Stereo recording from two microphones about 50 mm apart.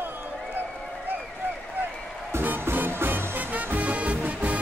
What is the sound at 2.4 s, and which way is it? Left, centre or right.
Music, right.